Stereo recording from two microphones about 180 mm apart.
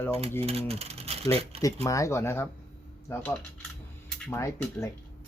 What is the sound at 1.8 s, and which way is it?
Speech, 15° left (ahead or behind).